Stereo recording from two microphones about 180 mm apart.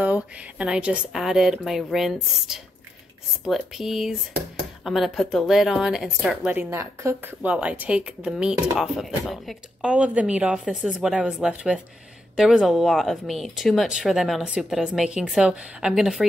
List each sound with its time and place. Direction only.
0.0 s speech: 5° right (ahead or behind)